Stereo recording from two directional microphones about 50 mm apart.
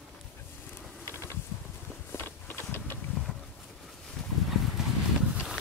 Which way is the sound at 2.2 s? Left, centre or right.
Left.